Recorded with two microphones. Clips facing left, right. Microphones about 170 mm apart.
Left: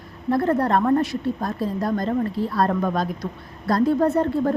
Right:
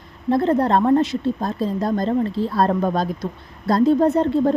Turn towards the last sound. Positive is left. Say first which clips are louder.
# right 3 dB
turn(degrees=-25)  # may be behind; listen again after turning